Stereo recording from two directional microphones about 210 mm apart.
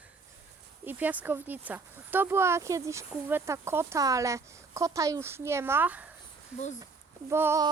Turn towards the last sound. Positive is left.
turn(degrees=-10)  # may be behind; listen again after turning